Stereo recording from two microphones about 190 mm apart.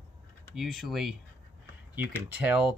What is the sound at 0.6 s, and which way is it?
Speech, centre (ahead or behind).